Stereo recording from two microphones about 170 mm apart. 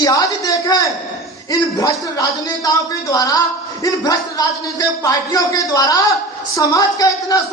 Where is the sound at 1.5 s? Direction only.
20° left (ahead or behind).